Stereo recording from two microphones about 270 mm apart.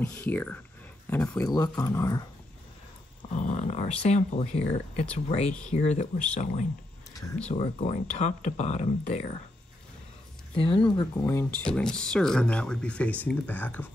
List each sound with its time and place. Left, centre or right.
0.0 s speech: centre
3.3 s speech: left
7.2 s speech: centre
7.5 s speech: left
10.5 s speech: centre
11.0 s speech: centre